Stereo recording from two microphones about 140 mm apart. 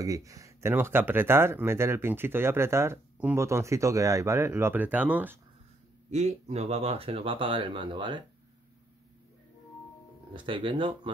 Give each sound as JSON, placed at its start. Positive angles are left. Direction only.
{"t": 0.0, "sound": "speech", "side_deg": -25}
{"t": 6.0, "sound": "speech", "side_deg": -55}
{"t": 10.3, "sound": "speech", "side_deg": -35}